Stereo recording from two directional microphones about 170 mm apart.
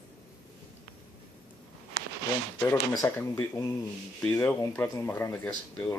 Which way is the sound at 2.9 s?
15° left (ahead or behind).